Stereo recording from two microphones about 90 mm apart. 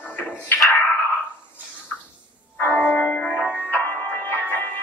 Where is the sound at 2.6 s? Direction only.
20° left (ahead or behind).